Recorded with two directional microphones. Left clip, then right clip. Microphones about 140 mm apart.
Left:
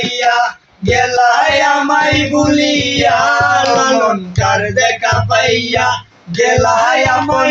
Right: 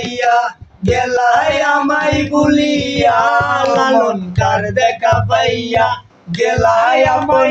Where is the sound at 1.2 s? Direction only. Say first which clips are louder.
Left 2 dB; 25° right (ahead or behind).